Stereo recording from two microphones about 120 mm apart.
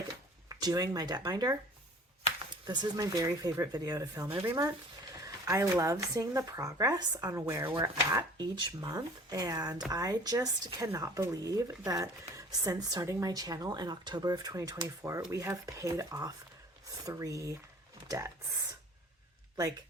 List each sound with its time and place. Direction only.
0.4 s speech: 30° right (ahead or behind)
2.6 s speech: 35° right (ahead or behind)
7.8 s speech: 35° right (ahead or behind)